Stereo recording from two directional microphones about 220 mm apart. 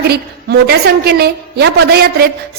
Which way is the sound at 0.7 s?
45° right (ahead or behind).